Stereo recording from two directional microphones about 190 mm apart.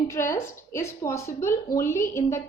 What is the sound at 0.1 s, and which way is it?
A woman's voice, 15° left (ahead or behind).